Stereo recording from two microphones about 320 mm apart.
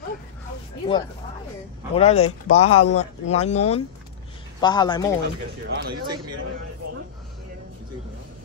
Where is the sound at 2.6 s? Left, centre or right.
Left.